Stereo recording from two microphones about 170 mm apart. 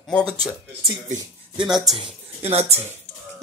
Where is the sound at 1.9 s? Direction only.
35° right (ahead or behind).